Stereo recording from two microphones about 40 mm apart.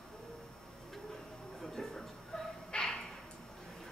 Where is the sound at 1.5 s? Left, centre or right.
Centre.